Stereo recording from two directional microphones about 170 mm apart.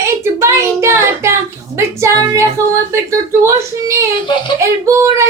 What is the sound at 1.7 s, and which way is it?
A child's voice, 15° right (ahead or behind).